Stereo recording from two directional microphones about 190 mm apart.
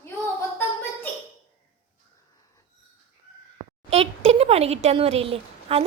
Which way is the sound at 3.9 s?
30° right (ahead or behind).